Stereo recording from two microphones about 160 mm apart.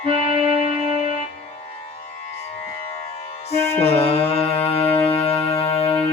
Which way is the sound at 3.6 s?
15° left (ahead or behind).